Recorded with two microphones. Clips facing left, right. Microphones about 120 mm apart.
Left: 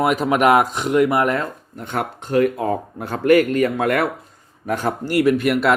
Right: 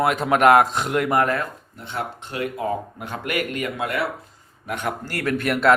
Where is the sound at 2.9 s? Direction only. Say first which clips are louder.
Left 12 dB; 35° left (ahead or behind).